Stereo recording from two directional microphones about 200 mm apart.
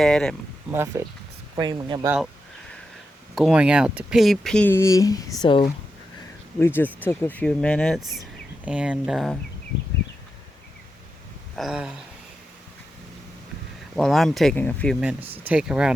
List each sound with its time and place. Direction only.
0.0 s speech: centre (ahead or behind)
0.7 s speech: 10° right (ahead or behind)
1.5 s speech: 20° right (ahead or behind)
2.0 s a sound: 5° right (ahead or behind)
3.3 s speech: 5° right (ahead or behind); by 5.6 s 20° left (ahead or behind)
6.6 s speech: 10° left (ahead or behind)
11.5 s speech: centre (ahead or behind)
13.9 s speech: centre (ahead or behind)
15.0 s speech: 10° right (ahead or behind)